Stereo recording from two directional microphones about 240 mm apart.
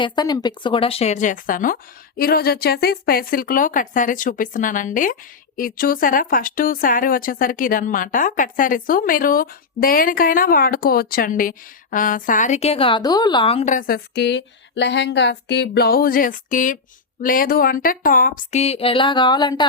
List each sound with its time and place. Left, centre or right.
0.0 s speech: centre